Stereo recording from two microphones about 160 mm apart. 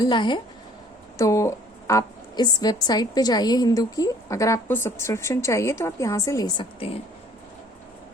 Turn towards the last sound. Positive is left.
turn(degrees=35)  # may be behind; listen again after turning